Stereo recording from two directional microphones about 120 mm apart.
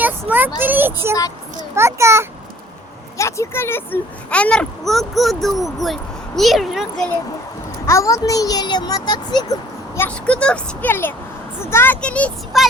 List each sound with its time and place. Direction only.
0.0 s a child's voice: 15° right (ahead or behind)
3.2 s speech: 25° left (ahead or behind); by 7.1 s centre (ahead or behind)
7.9 s a child's voice: 25° left (ahead or behind)
10.2 s speech: 10° left (ahead or behind)
12.5 s speech: centre (ahead or behind)